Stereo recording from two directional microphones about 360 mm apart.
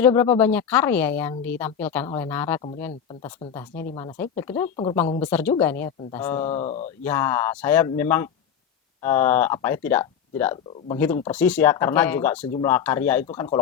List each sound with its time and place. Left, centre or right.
0.0 s a woman's voice: centre
6.4 s speech: centre
7.0 s a woman's voice: centre